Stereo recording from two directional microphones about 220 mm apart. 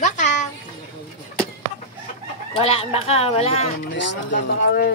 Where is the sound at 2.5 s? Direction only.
25° left (ahead or behind).